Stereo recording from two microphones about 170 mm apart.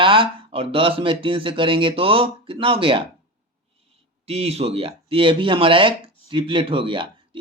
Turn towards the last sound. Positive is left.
turn(degrees=-30)  # may be behind; listen again after turning